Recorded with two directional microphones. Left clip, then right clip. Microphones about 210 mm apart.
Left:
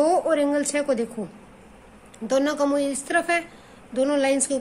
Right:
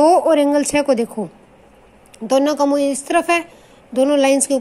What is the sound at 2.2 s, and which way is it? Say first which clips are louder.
A woman's voice: right 6 dB; 25° right (ahead or behind).